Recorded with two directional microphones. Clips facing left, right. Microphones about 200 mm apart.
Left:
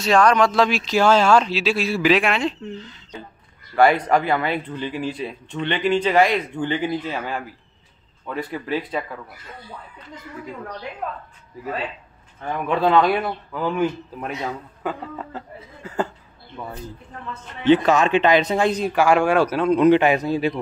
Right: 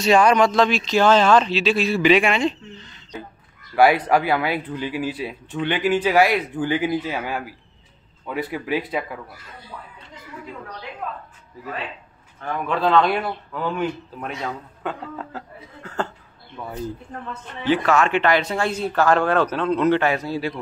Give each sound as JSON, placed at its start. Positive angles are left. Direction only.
{"t": 0.0, "sound": "speech", "side_deg": -5}
{"t": 3.7, "sound": "speech", "side_deg": -5}
{"t": 12.6, "sound": "speech", "side_deg": 10}
{"t": 17.6, "sound": "speech", "side_deg": 20}